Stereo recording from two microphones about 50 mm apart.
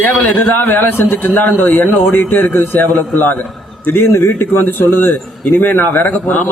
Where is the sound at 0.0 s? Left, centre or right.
Left.